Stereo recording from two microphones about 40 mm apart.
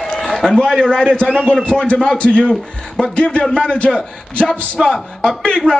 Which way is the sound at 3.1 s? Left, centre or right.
Left.